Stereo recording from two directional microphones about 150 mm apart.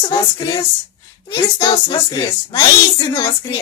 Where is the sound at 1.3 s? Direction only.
30° left (ahead or behind).